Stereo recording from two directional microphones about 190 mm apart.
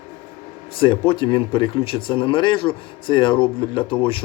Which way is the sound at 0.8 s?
25° left (ahead or behind).